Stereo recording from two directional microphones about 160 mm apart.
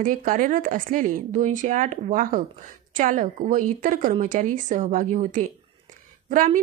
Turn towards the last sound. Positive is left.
turn(degrees=-55)  # may be behind; listen again after turning